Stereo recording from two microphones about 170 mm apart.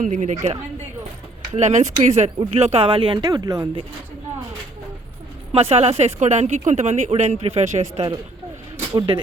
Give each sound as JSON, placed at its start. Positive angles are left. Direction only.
{"t": 0.0, "sound": "a woman's voice", "side_deg": -50}
{"t": 1.5, "sound": "speech", "side_deg": -45}
{"t": 5.5, "sound": "speech", "side_deg": -35}
{"t": 8.9, "sound": "speech", "side_deg": -25}